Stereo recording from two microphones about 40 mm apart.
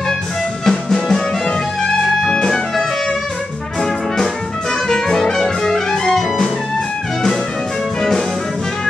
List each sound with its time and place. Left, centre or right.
0.7 s music: centre
2.3 s music: centre
4.8 s music: centre